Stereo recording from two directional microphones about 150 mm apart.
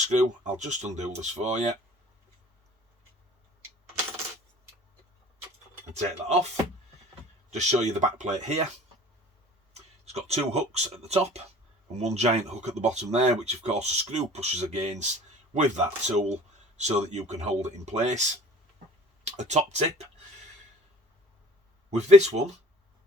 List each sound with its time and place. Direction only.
0.1 s speech: 55° right (ahead or behind)
5.9 s speech: 45° right (ahead or behind)
7.5 s speech: 50° right (ahead or behind)
9.7 s speech: 45° right (ahead or behind)
19.2 s speech: 50° right (ahead or behind)
21.8 s speech: 50° right (ahead or behind)